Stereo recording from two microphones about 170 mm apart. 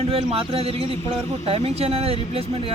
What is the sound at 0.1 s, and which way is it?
Speech, 35° right (ahead or behind).